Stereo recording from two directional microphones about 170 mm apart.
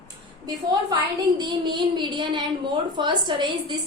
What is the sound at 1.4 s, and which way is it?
A woman's voice, 25° right (ahead or behind).